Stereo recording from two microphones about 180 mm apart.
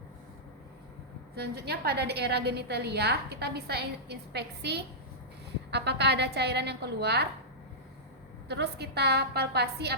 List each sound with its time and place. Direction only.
1.4 s a woman's voice: 60° right (ahead or behind)
8.4 s a woman's voice: 65° right (ahead or behind)